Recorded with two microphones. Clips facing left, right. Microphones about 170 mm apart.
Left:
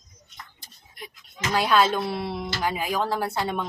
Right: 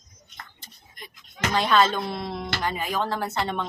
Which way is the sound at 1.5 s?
10° left (ahead or behind).